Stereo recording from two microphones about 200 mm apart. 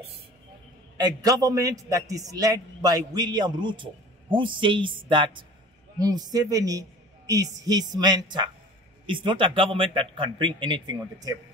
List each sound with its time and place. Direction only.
0.9 s a man's voice: 20° right (ahead or behind)